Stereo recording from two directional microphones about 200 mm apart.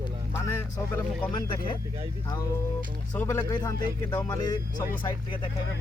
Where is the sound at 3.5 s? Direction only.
20° left (ahead or behind).